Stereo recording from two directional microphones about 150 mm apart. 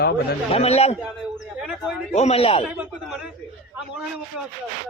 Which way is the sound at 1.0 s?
5° right (ahead or behind).